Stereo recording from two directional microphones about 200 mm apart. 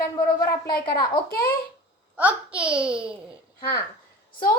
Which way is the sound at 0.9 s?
20° left (ahead or behind).